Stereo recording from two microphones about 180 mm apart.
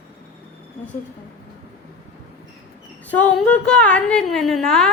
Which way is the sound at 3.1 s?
5° left (ahead or behind).